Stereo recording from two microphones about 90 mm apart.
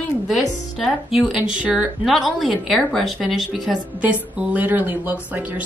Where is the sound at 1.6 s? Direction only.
15° right (ahead or behind).